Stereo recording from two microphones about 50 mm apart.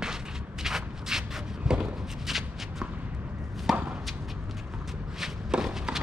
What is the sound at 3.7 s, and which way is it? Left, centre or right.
Chop, centre.